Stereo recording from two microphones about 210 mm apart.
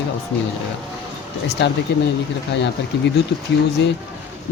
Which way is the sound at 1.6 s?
55° left (ahead or behind).